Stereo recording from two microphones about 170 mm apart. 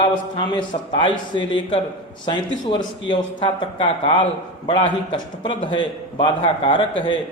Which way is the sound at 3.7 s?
35° left (ahead or behind).